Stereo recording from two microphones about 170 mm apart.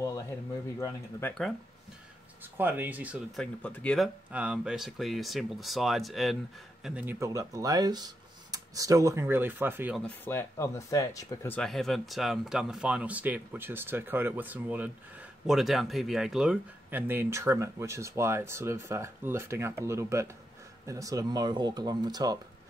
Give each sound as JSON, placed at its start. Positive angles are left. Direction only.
{"t": 0.7, "sound": "speech", "side_deg": 20}
{"t": 2.5, "sound": "speech", "side_deg": -10}
{"t": 3.3, "sound": "speech", "side_deg": 5}
{"t": 4.3, "sound": "speech", "side_deg": -5}
{"t": 10.0, "sound": "speech", "side_deg": 10}